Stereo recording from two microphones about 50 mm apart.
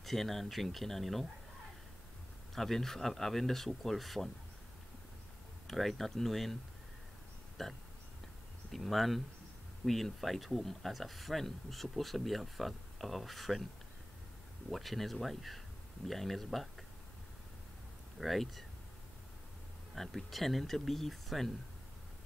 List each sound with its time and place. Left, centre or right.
0.0 s speech: centre
2.5 s speech: centre
5.7 s speech: centre
7.6 s speech: centre
14.7 s speech: centre
18.2 s speech: centre
20.0 s speech: centre